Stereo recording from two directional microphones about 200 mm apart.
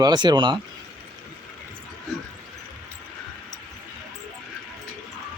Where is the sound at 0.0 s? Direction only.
20° right (ahead or behind).